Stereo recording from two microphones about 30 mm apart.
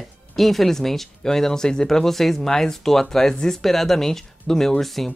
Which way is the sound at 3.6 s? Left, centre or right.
Centre.